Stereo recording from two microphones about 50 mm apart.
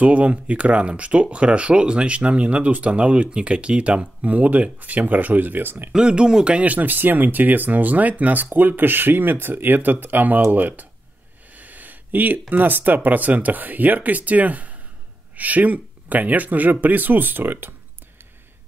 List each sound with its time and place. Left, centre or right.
0.0 s speech: right
5.9 s speech: centre; by 17.7 s right